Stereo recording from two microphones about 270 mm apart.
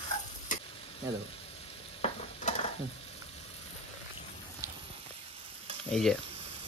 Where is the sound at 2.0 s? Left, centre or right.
Left.